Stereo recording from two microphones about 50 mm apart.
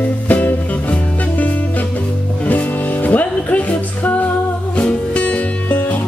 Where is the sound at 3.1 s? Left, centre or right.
Left.